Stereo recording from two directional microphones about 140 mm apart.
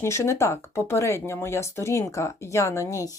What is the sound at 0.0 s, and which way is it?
Speech, 20° left (ahead or behind).